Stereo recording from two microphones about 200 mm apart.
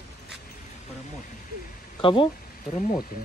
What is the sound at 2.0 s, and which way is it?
Speech, 25° left (ahead or behind).